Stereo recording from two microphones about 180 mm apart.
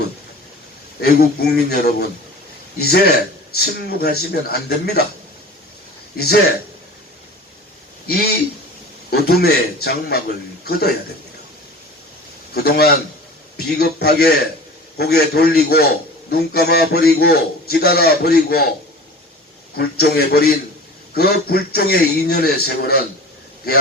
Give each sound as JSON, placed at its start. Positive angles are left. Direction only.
{"t": 1.0, "sound": "a man's voice", "side_deg": 60}
{"t": 6.1, "sound": "a man's voice", "side_deg": 60}
{"t": 8.0, "sound": "a man's voice", "side_deg": 60}
{"t": 12.5, "sound": "a man's voice", "side_deg": 60}
{"t": 19.7, "sound": "a man's voice", "side_deg": 60}